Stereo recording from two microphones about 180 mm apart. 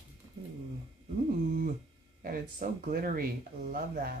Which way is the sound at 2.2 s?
55° right (ahead or behind).